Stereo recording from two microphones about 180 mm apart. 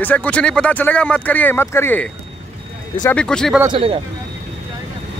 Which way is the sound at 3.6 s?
30° right (ahead or behind).